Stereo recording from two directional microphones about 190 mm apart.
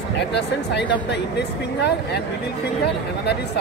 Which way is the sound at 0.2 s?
65° left (ahead or behind).